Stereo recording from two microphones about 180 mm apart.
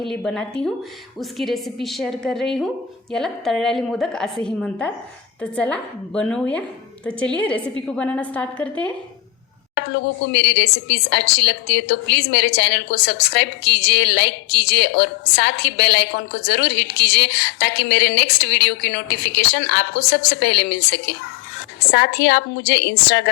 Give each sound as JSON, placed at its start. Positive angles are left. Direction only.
{"t": 0.0, "sound": "a woman's voice", "side_deg": 0}
{"t": 9.7, "sound": "a woman's voice", "side_deg": 75}